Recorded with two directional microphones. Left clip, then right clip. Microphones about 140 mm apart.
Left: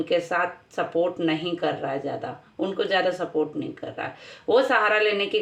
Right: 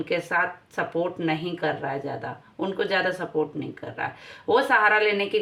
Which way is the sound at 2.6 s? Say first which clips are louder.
Left 1 dB; 30° right (ahead or behind).